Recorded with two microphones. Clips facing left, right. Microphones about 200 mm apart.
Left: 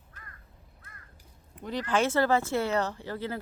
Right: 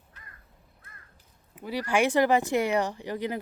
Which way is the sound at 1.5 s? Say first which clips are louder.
Right 2 dB; 10° right (ahead or behind).